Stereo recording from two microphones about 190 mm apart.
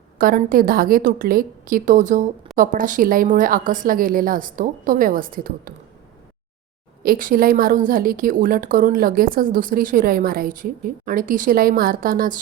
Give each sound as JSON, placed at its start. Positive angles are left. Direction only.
{"t": 0.2, "sound": "a woman's voice", "side_deg": -45}
{"t": 7.0, "sound": "a woman's voice", "side_deg": -50}